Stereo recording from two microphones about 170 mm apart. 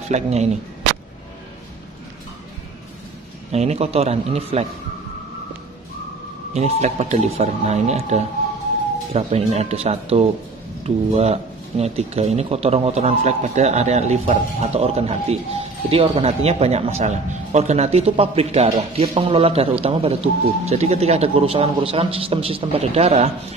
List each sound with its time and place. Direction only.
0.1 s speech: 40° right (ahead or behind)
3.5 s speech: 40° right (ahead or behind)
6.5 s speech: 40° right (ahead or behind)